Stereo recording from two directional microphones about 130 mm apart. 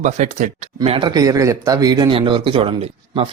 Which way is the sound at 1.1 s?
25° right (ahead or behind).